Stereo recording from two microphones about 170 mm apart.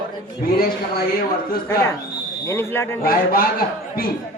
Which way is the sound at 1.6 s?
15° left (ahead or behind).